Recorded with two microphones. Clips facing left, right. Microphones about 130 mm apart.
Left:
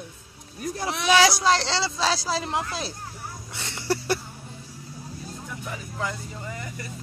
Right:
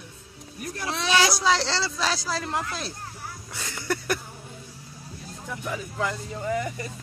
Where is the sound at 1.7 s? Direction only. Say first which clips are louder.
Left 2 dB; 25° left (ahead or behind).